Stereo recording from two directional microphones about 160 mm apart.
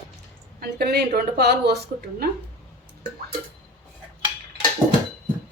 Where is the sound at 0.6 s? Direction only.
80° right.